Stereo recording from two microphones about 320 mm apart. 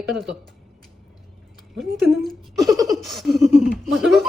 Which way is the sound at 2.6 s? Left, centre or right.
Centre.